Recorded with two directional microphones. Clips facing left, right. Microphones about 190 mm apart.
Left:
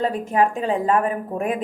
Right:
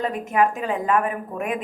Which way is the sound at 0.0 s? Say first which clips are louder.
Left 1 dB; 30° left (ahead or behind).